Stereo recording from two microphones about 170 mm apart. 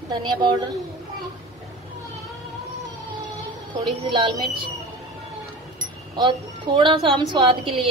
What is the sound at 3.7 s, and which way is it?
Speech, 30° right (ahead or behind).